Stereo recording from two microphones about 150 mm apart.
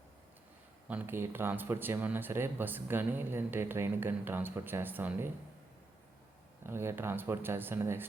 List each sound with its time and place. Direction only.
0.9 s speech: 15° right (ahead or behind)
6.7 s speech: 15° right (ahead or behind)